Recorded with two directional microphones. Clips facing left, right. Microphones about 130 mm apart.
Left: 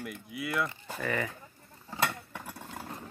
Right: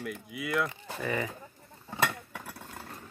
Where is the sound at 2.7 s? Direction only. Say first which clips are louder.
Left 3 dB; 20° left (ahead or behind).